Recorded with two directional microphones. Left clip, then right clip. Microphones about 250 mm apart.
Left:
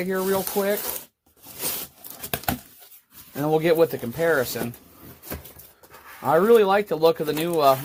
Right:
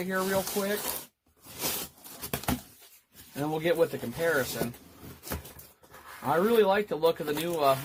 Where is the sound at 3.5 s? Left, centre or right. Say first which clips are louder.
Left 7 dB; left.